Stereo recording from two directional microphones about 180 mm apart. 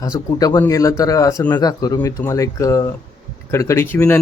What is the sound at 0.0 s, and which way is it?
Speech, 20° left (ahead or behind).